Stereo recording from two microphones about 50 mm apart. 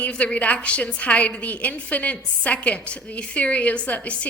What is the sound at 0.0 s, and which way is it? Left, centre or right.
A woman's voice, left.